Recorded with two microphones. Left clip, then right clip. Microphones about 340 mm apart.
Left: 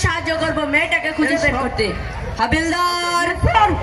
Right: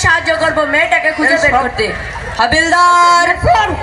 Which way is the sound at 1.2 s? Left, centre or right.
Centre.